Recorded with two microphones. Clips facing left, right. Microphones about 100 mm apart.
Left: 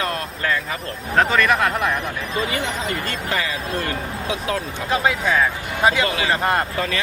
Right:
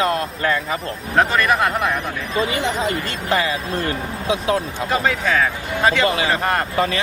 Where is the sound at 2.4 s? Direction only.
25° right (ahead or behind).